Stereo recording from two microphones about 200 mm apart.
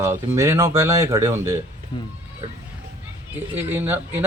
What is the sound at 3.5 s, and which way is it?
Speech, 10° right (ahead or behind).